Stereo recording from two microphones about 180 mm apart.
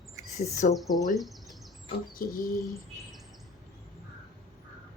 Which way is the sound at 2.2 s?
50° left (ahead or behind).